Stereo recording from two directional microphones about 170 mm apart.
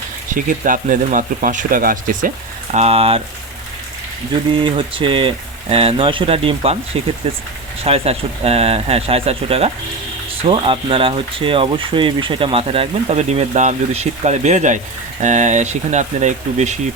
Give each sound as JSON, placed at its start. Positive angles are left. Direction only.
{"t": 0.3, "sound": "speech", "side_deg": -50}
{"t": 2.7, "sound": "speech", "side_deg": -35}
{"t": 4.6, "sound": "speech", "side_deg": -30}